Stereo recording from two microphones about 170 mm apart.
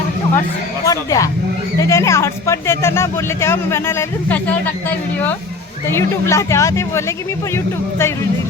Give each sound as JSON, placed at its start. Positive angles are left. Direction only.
{"t": 0.9, "sound": "speech", "side_deg": 20}